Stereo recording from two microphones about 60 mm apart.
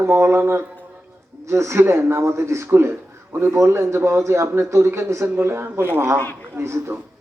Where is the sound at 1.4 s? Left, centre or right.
Right.